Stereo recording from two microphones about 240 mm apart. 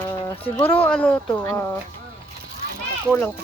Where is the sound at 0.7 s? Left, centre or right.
Centre.